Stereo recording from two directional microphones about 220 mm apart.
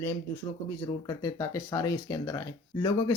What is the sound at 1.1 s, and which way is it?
Speech, 15° left (ahead or behind).